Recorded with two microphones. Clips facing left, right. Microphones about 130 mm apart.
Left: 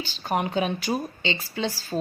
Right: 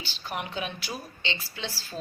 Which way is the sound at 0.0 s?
45° left (ahead or behind).